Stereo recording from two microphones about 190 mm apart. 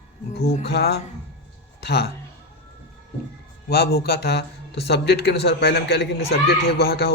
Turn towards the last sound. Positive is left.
turn(degrees=55)  # may be behind; listen again after turning